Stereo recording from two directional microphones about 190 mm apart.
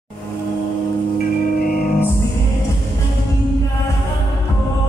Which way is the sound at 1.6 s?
50° left (ahead or behind).